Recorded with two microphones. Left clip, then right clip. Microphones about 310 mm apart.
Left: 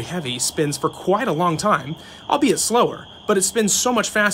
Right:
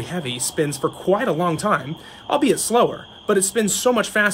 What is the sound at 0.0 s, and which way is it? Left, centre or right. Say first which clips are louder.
Speech: left 1 dB; centre.